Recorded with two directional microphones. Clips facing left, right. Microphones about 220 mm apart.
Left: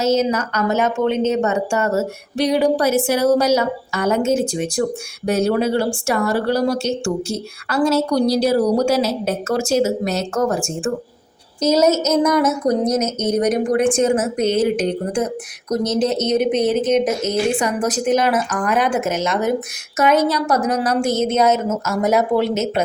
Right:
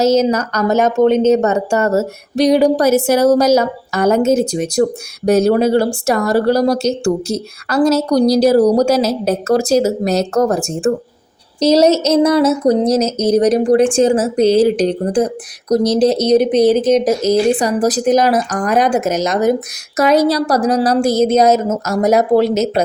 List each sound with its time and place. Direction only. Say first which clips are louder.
0.0 s speech: right 5 dB; 40° right (ahead or behind)